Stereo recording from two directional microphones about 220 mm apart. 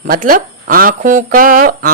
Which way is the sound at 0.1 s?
40° right (ahead or behind).